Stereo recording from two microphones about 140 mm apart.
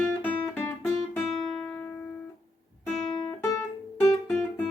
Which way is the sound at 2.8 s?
Centre (ahead or behind).